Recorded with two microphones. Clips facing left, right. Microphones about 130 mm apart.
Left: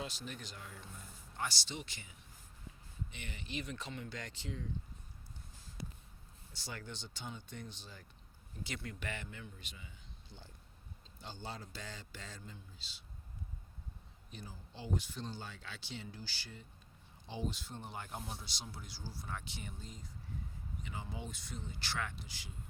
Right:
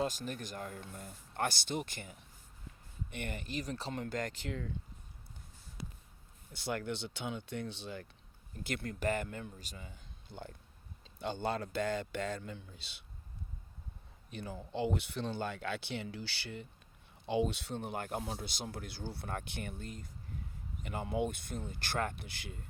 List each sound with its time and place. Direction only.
0.0 s speech: 45° right (ahead or behind)
4.0 s speech: 50° right (ahead or behind)
6.5 s speech: 55° right (ahead or behind)
8.6 s speech: 50° right (ahead or behind); by 13.0 s 65° right (ahead or behind)
14.3 s speech: 65° right (ahead or behind)